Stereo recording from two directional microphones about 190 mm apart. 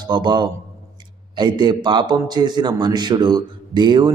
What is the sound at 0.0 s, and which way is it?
A man's voice, 25° right (ahead or behind).